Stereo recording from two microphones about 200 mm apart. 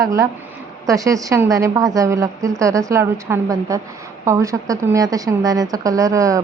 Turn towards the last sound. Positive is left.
turn(degrees=-15)  # may be behind; listen again after turning